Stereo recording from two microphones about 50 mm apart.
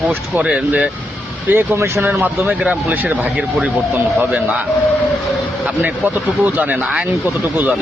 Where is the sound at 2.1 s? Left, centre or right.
Right.